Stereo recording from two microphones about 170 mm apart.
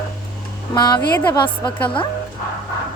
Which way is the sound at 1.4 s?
10° left (ahead or behind).